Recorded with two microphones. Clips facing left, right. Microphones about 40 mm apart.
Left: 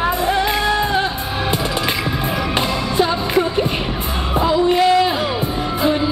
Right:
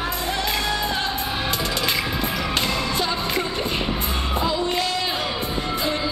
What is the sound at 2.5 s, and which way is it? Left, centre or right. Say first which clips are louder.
Music: left 7 dB; centre.